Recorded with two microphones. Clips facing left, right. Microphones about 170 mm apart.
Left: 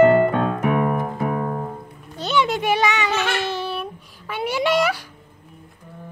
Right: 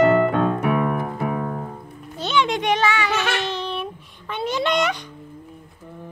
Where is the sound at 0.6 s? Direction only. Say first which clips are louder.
Left 1 dB; 40° left (ahead or behind).